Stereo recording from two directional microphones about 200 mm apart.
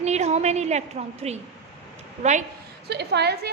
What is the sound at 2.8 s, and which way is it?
Speech, 55° right (ahead or behind).